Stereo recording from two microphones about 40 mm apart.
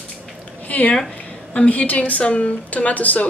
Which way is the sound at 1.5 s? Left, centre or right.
Left.